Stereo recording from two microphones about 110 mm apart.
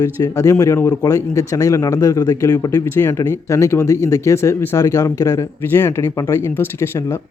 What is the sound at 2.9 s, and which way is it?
Speech, 25° left (ahead or behind).